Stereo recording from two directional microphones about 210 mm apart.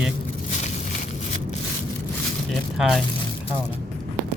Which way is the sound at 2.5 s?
Centre (ahead or behind).